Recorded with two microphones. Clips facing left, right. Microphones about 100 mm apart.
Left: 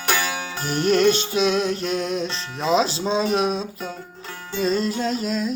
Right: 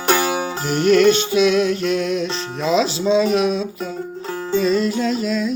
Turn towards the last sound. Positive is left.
turn(degrees=35)  # may be behind; listen again after turning